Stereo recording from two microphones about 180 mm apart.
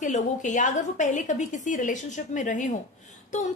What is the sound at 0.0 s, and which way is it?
A woman's voice, 45° left (ahead or behind).